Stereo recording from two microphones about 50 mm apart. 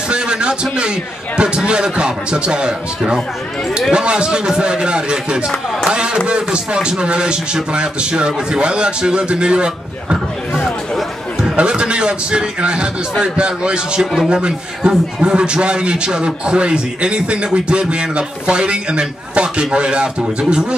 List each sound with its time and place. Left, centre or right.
0.1 s a man's voice: centre
3.9 s a man's voice: centre
5.9 s a sound: centre
6.2 s a man's voice: centre
11.4 s a man's voice: right